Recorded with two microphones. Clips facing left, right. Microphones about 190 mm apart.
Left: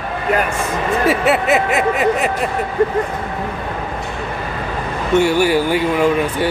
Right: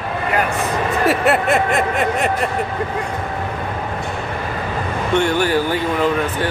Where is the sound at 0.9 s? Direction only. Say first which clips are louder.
Left 2 dB; centre (ahead or behind).